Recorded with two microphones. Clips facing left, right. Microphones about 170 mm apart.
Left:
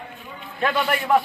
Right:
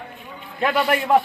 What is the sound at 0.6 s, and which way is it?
Speech, 20° right (ahead or behind).